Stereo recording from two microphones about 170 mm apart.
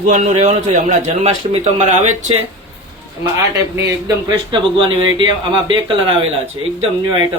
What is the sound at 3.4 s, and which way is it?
Speech, 15° right (ahead or behind).